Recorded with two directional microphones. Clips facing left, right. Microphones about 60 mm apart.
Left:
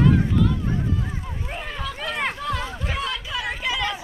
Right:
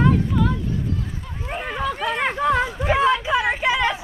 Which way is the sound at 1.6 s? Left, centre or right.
Right.